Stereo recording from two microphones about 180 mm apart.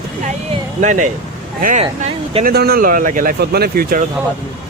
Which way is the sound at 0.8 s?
45° right (ahead or behind).